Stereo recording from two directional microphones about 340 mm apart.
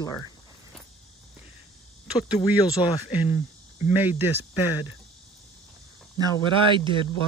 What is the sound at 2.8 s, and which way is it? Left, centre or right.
Speech, centre.